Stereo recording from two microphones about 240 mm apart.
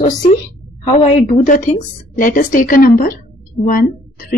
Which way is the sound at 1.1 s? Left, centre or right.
Left.